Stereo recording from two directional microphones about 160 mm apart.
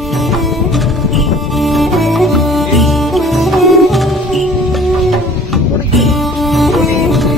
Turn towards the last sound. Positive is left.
turn(degrees=0)  # may be behind; listen again after turning